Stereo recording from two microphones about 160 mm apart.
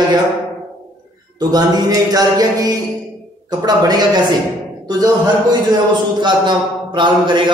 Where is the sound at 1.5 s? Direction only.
25° right (ahead or behind).